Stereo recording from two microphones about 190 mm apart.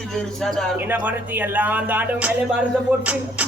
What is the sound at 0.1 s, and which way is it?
Speech, centre (ahead or behind).